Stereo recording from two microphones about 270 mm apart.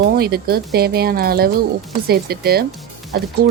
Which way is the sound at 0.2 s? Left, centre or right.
Right.